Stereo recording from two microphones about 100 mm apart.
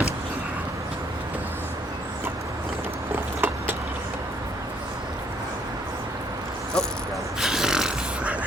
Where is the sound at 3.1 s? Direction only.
20° right (ahead or behind).